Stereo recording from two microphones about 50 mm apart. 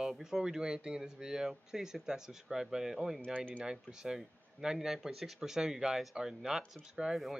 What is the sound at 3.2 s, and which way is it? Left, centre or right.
Speech, centre.